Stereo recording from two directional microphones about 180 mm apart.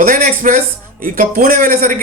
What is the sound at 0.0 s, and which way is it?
Speech, 50° right (ahead or behind).